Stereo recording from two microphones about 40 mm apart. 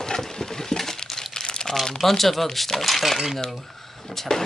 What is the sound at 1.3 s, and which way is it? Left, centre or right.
Crumpling, centre.